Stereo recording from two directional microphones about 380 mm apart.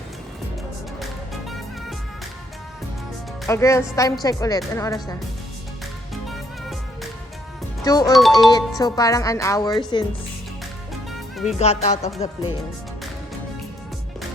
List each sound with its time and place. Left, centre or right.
0.9 s music: centre
3.4 s speech: centre
6.2 s music: centre
7.9 s speech: centre
11.4 s speech: centre